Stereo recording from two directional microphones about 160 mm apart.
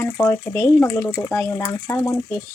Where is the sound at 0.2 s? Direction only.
15° left (ahead or behind).